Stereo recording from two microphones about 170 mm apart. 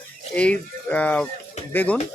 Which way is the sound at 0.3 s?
5° left (ahead or behind).